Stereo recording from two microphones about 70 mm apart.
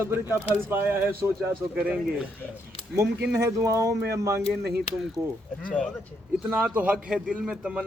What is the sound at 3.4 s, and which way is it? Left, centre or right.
Speech, right.